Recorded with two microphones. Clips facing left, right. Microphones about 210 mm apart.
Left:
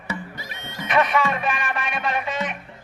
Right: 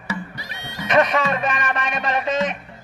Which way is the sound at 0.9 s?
40° right (ahead or behind).